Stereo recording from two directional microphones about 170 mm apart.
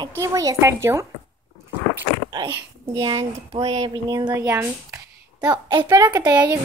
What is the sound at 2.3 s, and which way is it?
Speech, 25° right (ahead or behind).